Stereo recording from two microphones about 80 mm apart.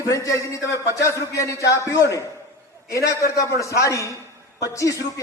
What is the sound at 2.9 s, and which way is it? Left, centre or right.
A woman's voice, left.